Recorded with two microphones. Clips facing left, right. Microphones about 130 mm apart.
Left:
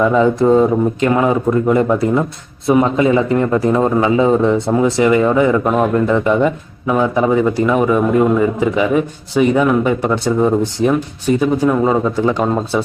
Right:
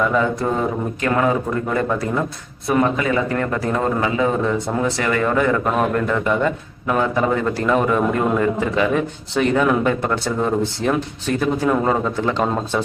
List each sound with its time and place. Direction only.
0.4 s a man's voice: 20° left (ahead or behind)